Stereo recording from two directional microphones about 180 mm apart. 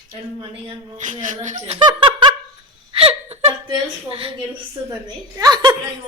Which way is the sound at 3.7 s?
30° right (ahead or behind).